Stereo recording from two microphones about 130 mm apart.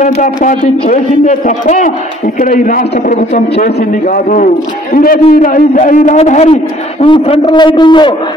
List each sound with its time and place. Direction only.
0.0 s a man's voice: 75° left (ahead or behind)
2.3 s a man's voice: 90° left; by 6.5 s 60° left (ahead or behind)
6.5 s a man's voice: 45° left (ahead or behind)